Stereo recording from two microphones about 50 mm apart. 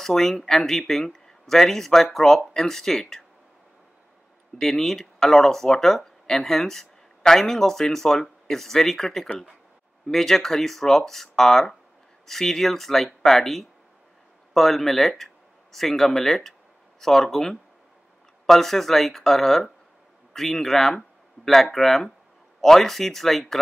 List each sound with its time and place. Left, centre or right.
0.0 s speech: centre
4.6 s speech: centre